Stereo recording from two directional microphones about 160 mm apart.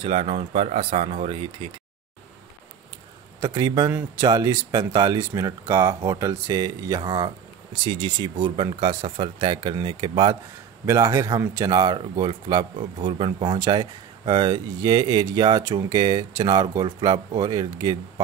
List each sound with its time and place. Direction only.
0.0 s speech: 35° right (ahead or behind)
3.3 s speech: 20° right (ahead or behind)
10.9 s speech: 20° right (ahead or behind)